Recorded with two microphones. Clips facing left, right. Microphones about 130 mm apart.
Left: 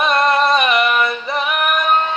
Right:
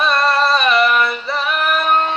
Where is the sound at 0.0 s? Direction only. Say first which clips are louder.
Left 1 dB; 20° left (ahead or behind).